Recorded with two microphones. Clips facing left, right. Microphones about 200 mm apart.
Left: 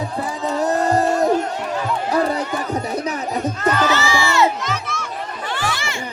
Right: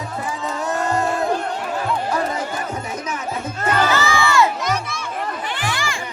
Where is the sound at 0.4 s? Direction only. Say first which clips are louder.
Left 5 dB; 35° left (ahead or behind).